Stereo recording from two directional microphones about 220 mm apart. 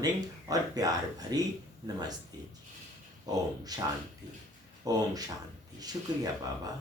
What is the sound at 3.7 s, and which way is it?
Speech, 15° right (ahead or behind).